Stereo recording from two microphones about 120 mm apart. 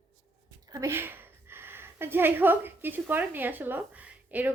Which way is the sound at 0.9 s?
20° right (ahead or behind).